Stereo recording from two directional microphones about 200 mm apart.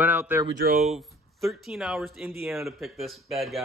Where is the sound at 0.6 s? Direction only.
40° right (ahead or behind).